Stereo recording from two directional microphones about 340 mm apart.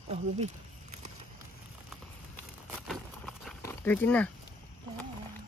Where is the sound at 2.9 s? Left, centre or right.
Centre.